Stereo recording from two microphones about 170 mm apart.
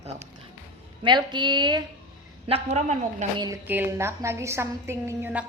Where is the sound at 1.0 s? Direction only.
25° right (ahead or behind).